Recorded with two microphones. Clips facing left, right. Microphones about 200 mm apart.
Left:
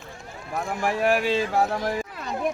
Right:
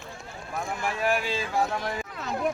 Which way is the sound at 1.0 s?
65° left (ahead or behind).